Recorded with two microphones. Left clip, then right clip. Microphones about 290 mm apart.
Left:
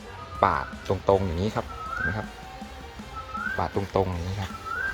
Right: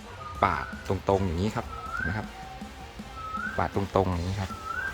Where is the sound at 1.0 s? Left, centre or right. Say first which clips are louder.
Left 3 dB; centre.